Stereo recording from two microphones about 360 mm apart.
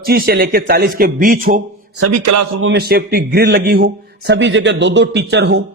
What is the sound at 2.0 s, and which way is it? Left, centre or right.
Speech, right.